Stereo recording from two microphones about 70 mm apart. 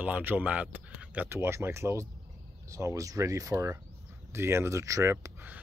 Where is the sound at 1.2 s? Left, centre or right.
Right.